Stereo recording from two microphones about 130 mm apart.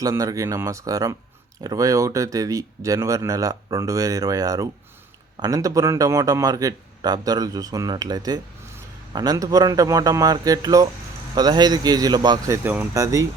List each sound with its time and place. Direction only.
0.0 s a man's voice: 25° right (ahead or behind)
12.6 s speech: 15° right (ahead or behind)